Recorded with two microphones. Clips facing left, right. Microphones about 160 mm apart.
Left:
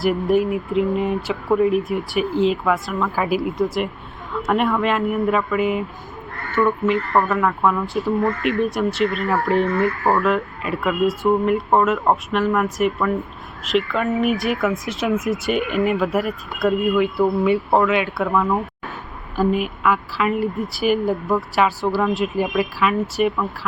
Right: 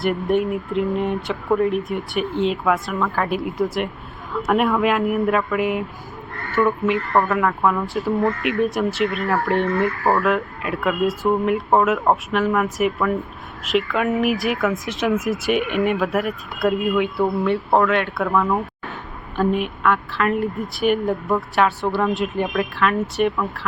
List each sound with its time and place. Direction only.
0.0 s speech: centre (ahead or behind)